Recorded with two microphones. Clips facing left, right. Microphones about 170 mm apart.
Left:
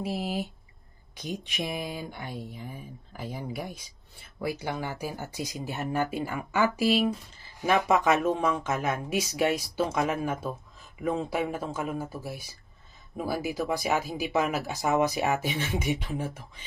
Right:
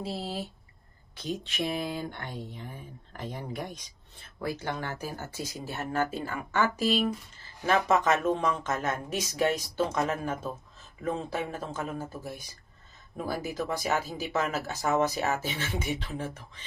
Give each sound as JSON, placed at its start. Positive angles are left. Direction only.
{"t": 0.0, "sound": "speech", "side_deg": 15}